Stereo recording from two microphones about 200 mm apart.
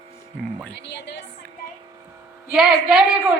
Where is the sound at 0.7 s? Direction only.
60° left (ahead or behind).